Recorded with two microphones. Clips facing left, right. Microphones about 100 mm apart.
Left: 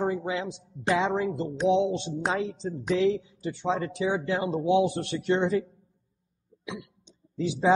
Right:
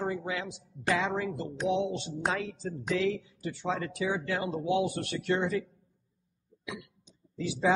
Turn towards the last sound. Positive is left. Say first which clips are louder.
# left 3 dB
turn(degrees=25)  # may be behind; listen again after turning